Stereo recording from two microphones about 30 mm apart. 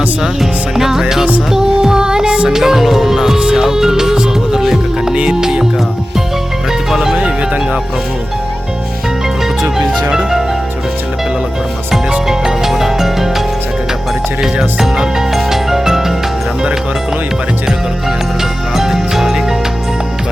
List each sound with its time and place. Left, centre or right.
0.3 s music: centre
2.2 s music: right
2.5 s music: centre
5.1 s music: right
6.9 s music: centre
9.6 s music: right
12.3 s music: centre
14.4 s speech: centre
15.3 s music: centre
18.7 s music: centre